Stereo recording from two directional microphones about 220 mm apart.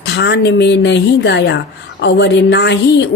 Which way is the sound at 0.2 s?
50° left (ahead or behind).